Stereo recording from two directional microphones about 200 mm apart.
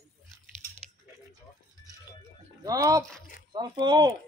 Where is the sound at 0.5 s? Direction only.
40° right (ahead or behind).